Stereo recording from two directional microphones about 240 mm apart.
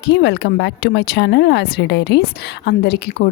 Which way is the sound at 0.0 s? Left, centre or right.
Left.